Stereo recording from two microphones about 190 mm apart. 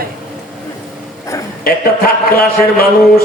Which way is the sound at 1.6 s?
55° left (ahead or behind).